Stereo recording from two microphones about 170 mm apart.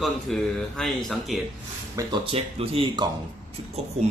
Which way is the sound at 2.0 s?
30° right (ahead or behind).